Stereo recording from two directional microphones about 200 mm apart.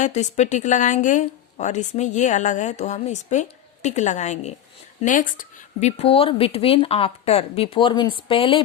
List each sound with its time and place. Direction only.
0.0 s a woman's voice: 35° left (ahead or behind)
6.0 s speech: 30° left (ahead or behind)